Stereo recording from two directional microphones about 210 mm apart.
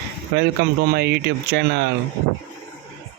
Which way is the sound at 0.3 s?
50° right (ahead or behind).